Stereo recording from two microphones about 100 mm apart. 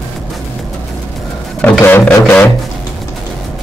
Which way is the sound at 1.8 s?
20° left (ahead or behind).